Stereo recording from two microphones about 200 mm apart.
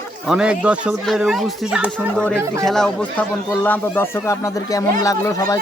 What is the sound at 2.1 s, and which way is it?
Speech, 5° left (ahead or behind).